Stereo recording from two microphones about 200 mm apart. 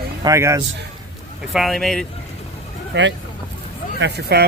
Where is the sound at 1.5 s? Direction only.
Centre (ahead or behind).